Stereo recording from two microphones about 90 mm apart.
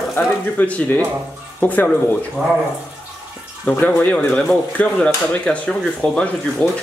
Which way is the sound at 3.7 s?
15° left (ahead or behind).